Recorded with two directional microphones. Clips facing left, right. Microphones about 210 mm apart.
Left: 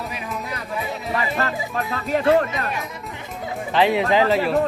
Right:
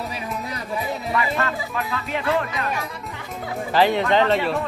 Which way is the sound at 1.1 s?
35° left (ahead or behind).